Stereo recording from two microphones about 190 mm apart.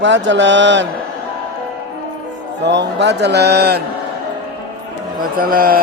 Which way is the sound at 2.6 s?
65° right (ahead or behind).